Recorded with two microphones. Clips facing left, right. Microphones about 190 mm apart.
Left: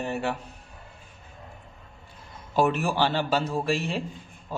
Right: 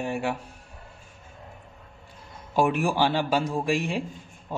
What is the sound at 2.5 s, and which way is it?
A man's voice, 10° right (ahead or behind).